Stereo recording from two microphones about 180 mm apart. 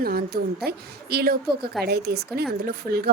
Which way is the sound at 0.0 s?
55° right (ahead or behind).